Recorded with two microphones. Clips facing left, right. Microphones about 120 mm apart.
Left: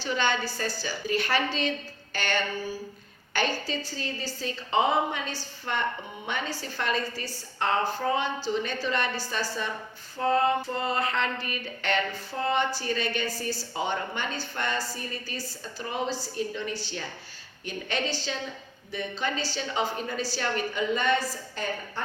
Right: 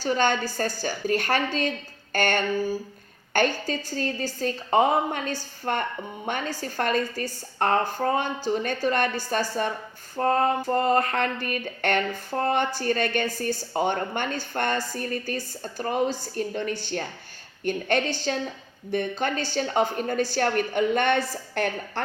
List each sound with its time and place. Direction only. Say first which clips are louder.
0.0 s a woman's voice: right 4 dB; 45° right (ahead or behind); by 22.0 s 70° right (ahead or behind)